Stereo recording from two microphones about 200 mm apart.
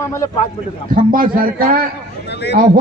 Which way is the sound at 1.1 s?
45° right (ahead or behind).